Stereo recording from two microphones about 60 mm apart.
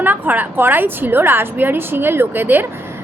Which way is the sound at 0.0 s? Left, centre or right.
Right.